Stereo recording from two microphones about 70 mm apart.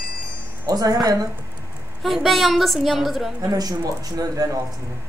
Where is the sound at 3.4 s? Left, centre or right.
Right.